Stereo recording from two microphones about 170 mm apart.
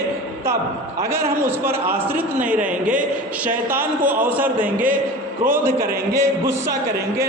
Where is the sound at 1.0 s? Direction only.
15° right (ahead or behind).